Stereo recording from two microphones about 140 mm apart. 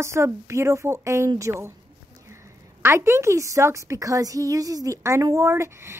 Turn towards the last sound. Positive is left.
turn(degrees=-20)  # may be behind; listen again after turning